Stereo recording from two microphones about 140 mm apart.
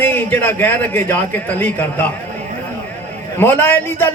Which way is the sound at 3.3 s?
15° left (ahead or behind).